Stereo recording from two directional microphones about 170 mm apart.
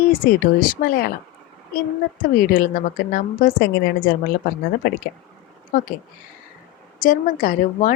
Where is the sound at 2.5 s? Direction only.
55° left (ahead or behind).